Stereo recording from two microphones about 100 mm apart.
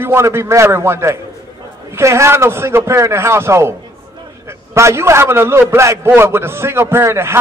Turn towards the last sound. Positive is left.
turn(degrees=-25)  # may be behind; listen again after turning